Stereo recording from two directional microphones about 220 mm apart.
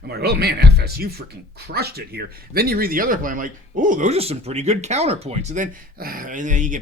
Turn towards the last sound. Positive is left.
turn(degrees=-35)  # may be behind; listen again after turning